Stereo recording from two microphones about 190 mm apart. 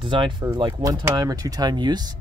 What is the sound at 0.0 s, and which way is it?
Speech, 25° right (ahead or behind).